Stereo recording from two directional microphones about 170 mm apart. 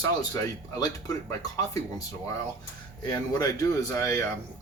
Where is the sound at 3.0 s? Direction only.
20° left (ahead or behind).